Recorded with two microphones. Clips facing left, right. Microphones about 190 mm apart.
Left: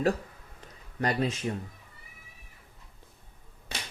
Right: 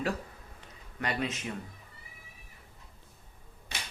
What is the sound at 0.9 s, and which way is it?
Speech, 35° left (ahead or behind).